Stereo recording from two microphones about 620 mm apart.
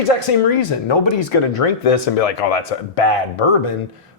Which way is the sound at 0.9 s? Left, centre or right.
Left.